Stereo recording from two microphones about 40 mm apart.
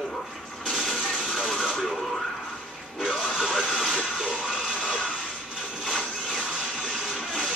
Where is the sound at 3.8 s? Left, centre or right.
Centre.